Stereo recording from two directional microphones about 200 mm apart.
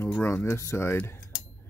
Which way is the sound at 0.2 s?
10° left (ahead or behind).